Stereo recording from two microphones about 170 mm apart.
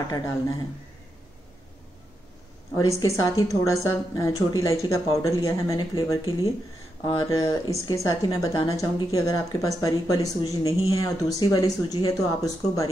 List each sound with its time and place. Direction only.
0.1 s speech: 25° left (ahead or behind)
2.7 s speech: 20° left (ahead or behind)